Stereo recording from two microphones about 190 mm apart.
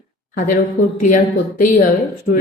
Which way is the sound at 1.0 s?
45° left (ahead or behind).